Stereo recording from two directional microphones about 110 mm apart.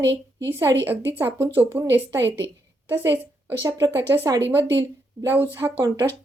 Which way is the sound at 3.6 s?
30° right (ahead or behind).